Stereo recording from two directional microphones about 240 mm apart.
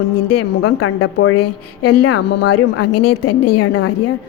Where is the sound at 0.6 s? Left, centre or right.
Left.